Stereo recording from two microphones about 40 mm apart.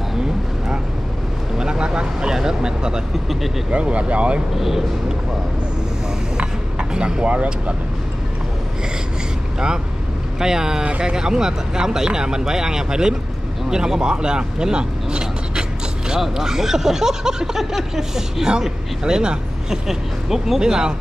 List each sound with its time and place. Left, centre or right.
0.1 s vehicle: centre
3.7 s speech: right
4.6 s speech: centre
6.3 s vehicle: right
10.4 s speech: centre